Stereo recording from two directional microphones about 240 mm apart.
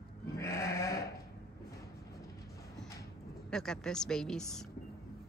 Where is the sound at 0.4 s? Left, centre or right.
Centre.